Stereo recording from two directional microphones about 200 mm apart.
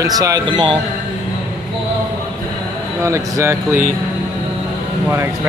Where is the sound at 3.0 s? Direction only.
15° right (ahead or behind).